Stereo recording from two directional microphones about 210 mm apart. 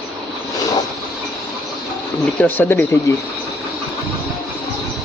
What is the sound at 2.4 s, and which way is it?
Speech, 10° left (ahead or behind).